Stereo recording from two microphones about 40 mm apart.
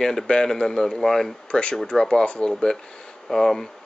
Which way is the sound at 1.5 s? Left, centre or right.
Centre.